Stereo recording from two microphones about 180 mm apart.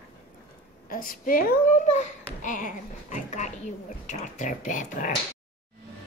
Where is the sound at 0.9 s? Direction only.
50° left (ahead or behind).